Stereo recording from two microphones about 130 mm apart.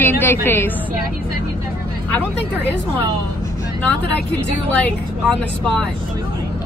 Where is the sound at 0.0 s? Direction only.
15° left (ahead or behind).